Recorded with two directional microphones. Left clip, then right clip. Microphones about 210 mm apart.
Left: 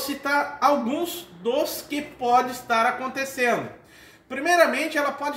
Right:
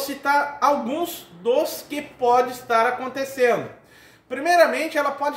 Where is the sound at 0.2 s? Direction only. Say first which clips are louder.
Right 2 dB; 10° right (ahead or behind).